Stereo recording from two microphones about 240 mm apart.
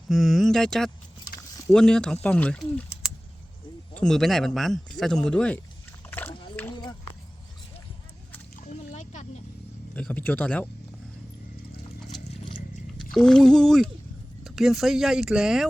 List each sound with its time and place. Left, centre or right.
0.1 s speech: centre
6.1 s splash: centre
8.6 s a sound: left
9.9 s speech: centre
12.1 s a sound: centre
13.0 s speech: centre